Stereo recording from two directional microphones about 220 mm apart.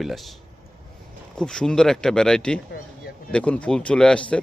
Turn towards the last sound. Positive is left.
turn(degrees=5)  # may be behind; listen again after turning